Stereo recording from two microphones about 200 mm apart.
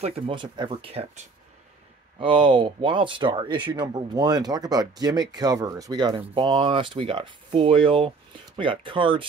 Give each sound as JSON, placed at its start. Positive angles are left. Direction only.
{"t": 0.0, "sound": "speech", "side_deg": -25}